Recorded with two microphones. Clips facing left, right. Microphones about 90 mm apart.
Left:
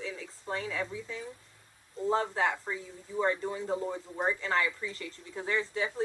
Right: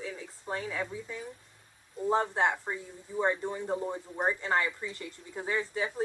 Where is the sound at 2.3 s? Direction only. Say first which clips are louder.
Right 2 dB; 25° right (ahead or behind).